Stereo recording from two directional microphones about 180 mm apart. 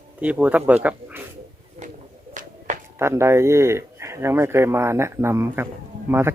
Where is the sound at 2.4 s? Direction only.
45° right (ahead or behind).